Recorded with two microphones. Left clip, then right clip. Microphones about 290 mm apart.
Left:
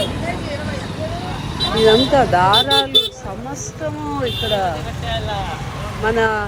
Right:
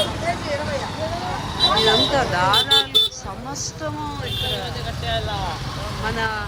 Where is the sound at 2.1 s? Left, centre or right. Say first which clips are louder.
Left 5 dB; centre.